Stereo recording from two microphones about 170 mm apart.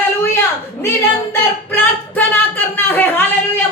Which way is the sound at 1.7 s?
10° left (ahead or behind).